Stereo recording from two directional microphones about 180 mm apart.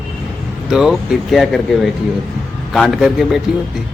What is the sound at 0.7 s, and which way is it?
Speech, 5° right (ahead or behind).